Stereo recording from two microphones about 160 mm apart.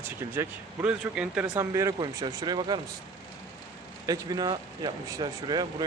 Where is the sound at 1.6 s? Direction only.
20° right (ahead or behind).